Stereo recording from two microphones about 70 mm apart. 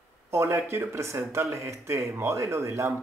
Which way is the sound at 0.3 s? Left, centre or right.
Right.